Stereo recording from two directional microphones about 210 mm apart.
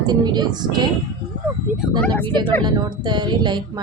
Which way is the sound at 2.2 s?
20° right (ahead or behind).